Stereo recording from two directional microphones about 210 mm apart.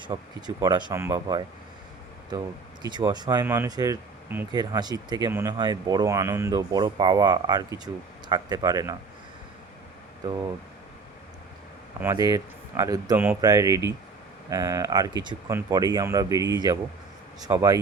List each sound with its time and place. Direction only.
0.0 s speech: 20° right (ahead or behind)
2.8 s speech: 20° right (ahead or behind)
11.9 s speech: 15° right (ahead or behind)